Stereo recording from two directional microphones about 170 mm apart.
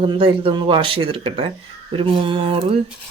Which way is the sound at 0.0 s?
30° right (ahead or behind).